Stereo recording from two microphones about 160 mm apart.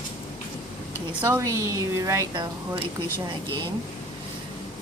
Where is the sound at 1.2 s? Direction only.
15° right (ahead or behind).